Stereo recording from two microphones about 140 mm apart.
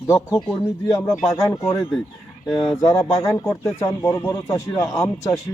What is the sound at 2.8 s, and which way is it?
A man's voice, 25° left (ahead or behind).